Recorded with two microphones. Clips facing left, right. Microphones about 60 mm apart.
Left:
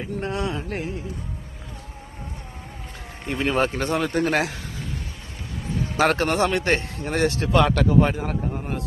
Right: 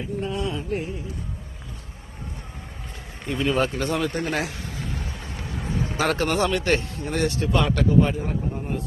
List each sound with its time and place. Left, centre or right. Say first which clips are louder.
0.2 s a sound: left 2 dB; left
3.2 s speech: left 1 dB; left
4.1 s a man's voice: left 4 dB; left
6.0 s speech: left 3 dB; left
6.5 s a man's voice: even; left
7.4 s speech: left 4 dB; left
8.5 s a sound: even; left